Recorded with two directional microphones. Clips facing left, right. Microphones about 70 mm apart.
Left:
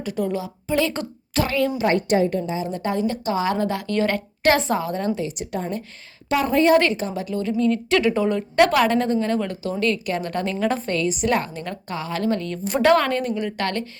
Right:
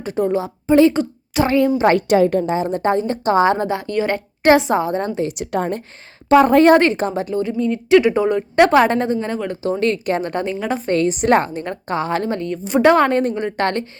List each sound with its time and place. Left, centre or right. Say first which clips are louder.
0.0 s a woman's voice: right 6 dB; right
1.9 s a woman's voice: right 5 dB; right
5.3 s a woman's voice: right 6 dB; right
6.2 s a woman's voice: right 10 dB; right
6.5 s a woman's voice: right 3 dB; right
6.9 s a woman's voice: right 5 dB; right
7.4 s speech: even; centre
9.5 s speech: right 4 dB; right; by 10.8 s centre
10.8 s a woman's voice: right 6 dB; right